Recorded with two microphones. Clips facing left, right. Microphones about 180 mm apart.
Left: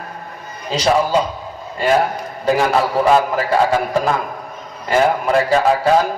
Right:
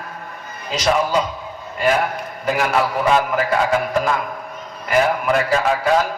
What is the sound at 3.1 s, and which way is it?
A man's voice, 30° left (ahead or behind).